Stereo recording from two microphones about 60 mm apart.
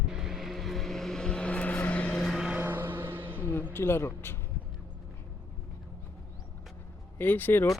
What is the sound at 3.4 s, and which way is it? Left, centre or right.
Speech, left.